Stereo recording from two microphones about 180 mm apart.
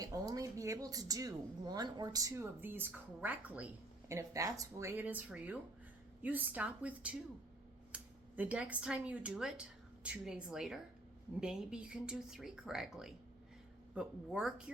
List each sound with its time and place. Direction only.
0.0 s speech: 20° right (ahead or behind); by 14.5 s 5° right (ahead or behind)